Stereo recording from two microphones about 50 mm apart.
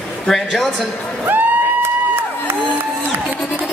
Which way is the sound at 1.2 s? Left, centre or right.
Right.